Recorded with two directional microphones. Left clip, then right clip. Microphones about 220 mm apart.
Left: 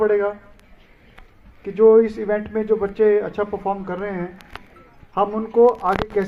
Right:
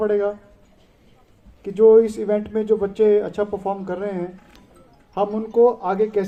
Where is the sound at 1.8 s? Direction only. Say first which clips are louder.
Even; 50° right (ahead or behind).